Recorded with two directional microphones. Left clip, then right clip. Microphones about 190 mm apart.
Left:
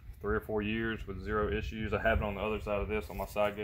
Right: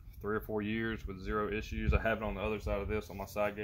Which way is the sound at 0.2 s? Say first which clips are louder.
Left 3 dB; 10° left (ahead or behind).